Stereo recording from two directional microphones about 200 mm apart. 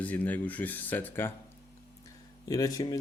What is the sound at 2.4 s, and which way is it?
Speech, 15° left (ahead or behind).